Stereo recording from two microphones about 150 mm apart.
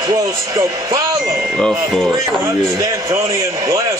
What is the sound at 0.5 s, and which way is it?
Speech, 20° right (ahead or behind).